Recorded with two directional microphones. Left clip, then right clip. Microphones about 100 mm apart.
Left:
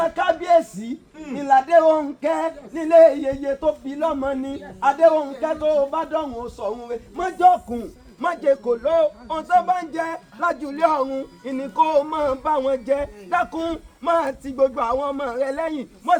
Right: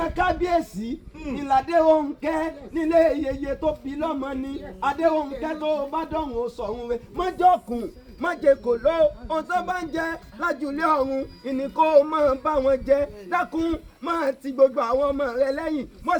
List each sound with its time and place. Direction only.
0.0 s a sound: 25° left (ahead or behind)
1.4 s speech: 35° left (ahead or behind)
8.2 s a man's voice: 35° right (ahead or behind)